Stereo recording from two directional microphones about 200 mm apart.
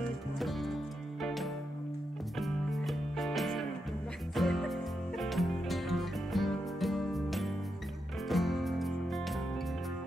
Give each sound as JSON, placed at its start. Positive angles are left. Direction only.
{"t": 0.0, "sound": "music", "side_deg": 0}